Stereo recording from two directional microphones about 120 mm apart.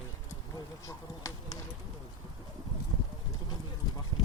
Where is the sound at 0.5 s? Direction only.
30° left (ahead or behind).